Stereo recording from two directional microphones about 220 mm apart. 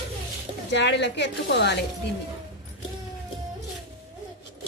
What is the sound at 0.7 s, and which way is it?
A woman's voice, 50° left (ahead or behind).